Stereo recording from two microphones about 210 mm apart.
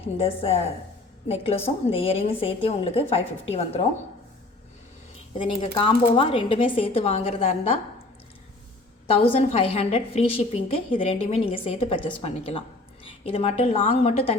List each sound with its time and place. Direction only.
0.2 s a woman's voice: 30° left (ahead or behind)
5.4 s a woman's voice: 25° left (ahead or behind)
9.0 s a woman's voice: 25° left (ahead or behind)